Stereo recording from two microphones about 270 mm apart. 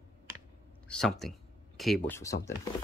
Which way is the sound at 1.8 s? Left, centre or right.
Centre.